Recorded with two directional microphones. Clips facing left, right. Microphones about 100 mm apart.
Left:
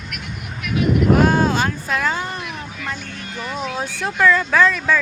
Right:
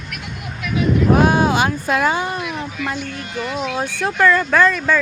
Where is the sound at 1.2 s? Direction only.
15° right (ahead or behind).